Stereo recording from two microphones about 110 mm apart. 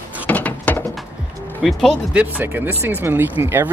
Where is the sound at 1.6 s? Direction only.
Centre (ahead or behind).